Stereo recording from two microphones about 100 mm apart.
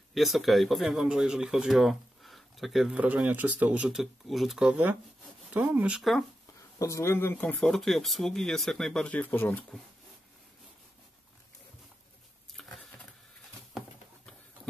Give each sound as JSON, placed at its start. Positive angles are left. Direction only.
{"t": 0.1, "sound": "speech", "side_deg": 0}
{"t": 3.3, "sound": "speech", "side_deg": -15}
{"t": 6.8, "sound": "speech", "side_deg": 30}
{"t": 7.6, "sound": "speech", "side_deg": 5}
{"t": 9.1, "sound": "speech", "side_deg": 15}
{"t": 12.6, "sound": "patter", "side_deg": 0}